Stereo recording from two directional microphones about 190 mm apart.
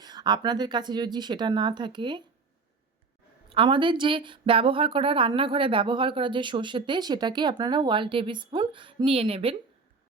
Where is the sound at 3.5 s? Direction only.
25° right (ahead or behind).